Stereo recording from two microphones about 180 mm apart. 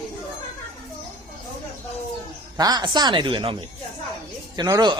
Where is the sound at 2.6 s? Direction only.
20° right (ahead or behind).